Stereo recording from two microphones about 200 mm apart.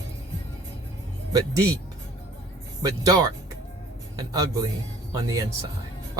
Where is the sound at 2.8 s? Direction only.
20° right (ahead or behind).